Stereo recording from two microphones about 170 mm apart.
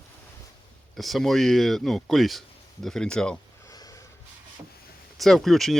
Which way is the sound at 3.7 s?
20° left (ahead or behind).